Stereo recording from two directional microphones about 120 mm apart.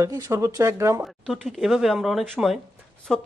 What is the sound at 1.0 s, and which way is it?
Speech, centre (ahead or behind).